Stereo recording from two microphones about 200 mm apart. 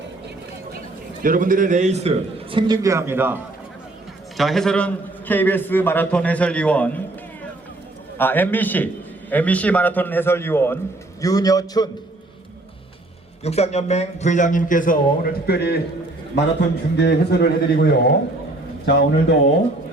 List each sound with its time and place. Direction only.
1.2 s a man's voice: 45° right (ahead or behind); by 3.4 s 10° right (ahead or behind)
4.4 s a man's voice: centre (ahead or behind)
8.2 s a man's voice: 10° left (ahead or behind)
13.4 s a man's voice: 30° left (ahead or behind); by 15.8 s 55° left (ahead or behind)
17.0 s a man's voice: 55° left (ahead or behind)